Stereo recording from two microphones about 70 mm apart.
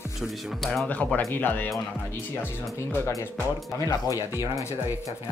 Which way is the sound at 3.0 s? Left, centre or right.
Left.